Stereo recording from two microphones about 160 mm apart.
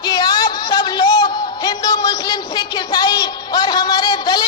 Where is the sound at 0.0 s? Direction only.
25° left (ahead or behind).